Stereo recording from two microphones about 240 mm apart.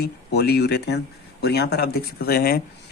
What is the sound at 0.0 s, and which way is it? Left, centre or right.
Speech, left.